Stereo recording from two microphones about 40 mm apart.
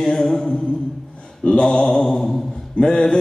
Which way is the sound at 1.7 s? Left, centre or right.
Centre.